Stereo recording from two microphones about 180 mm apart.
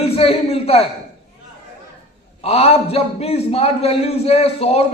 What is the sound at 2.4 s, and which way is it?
A man's voice, 35° left (ahead or behind).